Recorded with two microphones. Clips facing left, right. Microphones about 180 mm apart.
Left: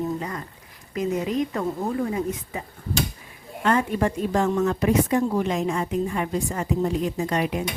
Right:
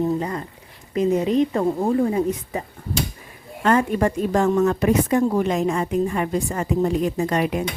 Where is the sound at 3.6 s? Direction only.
45° right (ahead or behind).